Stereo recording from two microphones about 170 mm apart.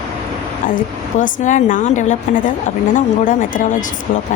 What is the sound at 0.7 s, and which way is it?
A woman's voice, 50° left (ahead or behind).